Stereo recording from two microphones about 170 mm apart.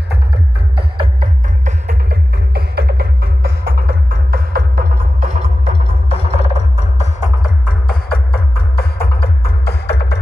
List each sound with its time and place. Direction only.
1.9 s music: 75° right (ahead or behind)
5.2 s music: 45° right (ahead or behind)
6.0 s music: 35° left (ahead or behind); by 10.1 s 75° left (ahead or behind)